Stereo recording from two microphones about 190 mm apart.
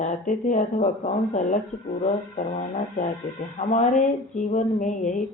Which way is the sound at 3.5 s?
40° left (ahead or behind).